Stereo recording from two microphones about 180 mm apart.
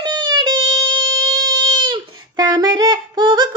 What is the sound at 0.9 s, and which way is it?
Music, 90° right.